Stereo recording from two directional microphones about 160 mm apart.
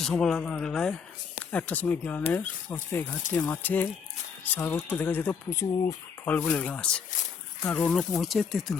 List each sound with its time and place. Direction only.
0.0 s speech: centre (ahead or behind)
2.6 s speech: 20° left (ahead or behind)
3.6 s speech: 10° left (ahead or behind)